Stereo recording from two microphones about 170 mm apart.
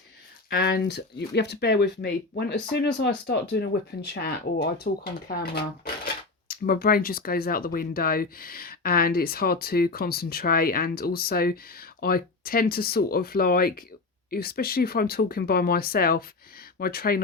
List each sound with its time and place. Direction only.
0.5 s speech: 70° left (ahead or behind)